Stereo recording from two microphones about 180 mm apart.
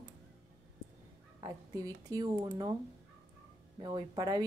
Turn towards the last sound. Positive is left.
turn(degrees=-25)  # may be behind; listen again after turning